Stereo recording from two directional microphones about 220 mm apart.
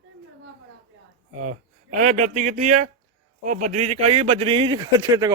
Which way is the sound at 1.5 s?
35° right (ahead or behind).